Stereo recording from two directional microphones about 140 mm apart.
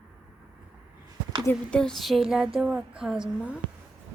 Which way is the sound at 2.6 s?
10° right (ahead or behind).